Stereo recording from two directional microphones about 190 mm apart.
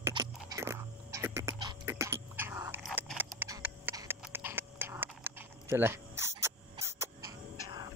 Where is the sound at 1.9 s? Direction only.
15° right (ahead or behind).